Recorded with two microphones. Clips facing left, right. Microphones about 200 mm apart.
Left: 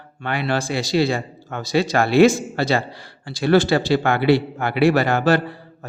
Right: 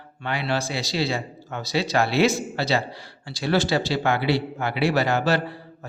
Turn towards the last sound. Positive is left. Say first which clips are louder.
# left 4 dB
turn(degrees=55)  # may be behind; listen again after turning